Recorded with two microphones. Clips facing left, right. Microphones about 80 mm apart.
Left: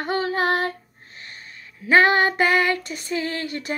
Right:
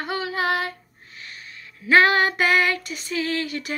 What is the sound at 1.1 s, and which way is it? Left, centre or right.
Female singing, left.